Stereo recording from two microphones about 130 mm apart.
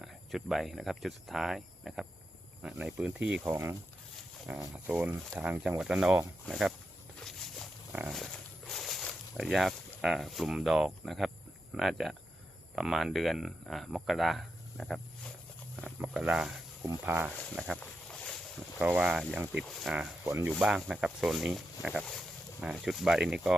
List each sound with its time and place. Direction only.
0.0 s speech: centre (ahead or behind)
4.7 s speech: 10° right (ahead or behind)
7.3 s a sound: 5° left (ahead or behind)
8.1 s walk: 5° left (ahead or behind)
11.7 s speech: centre (ahead or behind)
17.5 s a sound: 5° left (ahead or behind)
18.8 s speech: 10° right (ahead or behind)
19.6 s speech: centre (ahead or behind)
20.2 s speech: 20° right (ahead or behind)
20.6 s speech: 5° right (ahead or behind)